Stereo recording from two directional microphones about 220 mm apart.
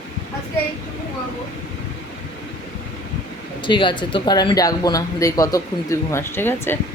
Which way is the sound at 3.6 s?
20° left (ahead or behind).